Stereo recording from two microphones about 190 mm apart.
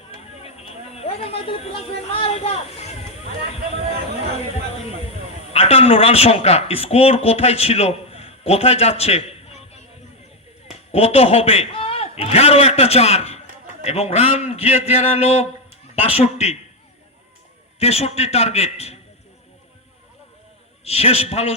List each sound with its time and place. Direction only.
0.2 s a sound: 35° left (ahead or behind)
4.4 s a man's voice: 35° left (ahead or behind)
10.9 s a man's voice: 30° left (ahead or behind)
17.7 s a man's voice: 35° left (ahead or behind)
20.8 s a man's voice: 35° left (ahead or behind)